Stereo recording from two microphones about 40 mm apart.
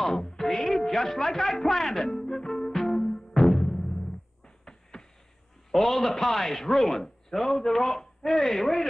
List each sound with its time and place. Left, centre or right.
0.0 s music: centre
5.7 s a man's voice: centre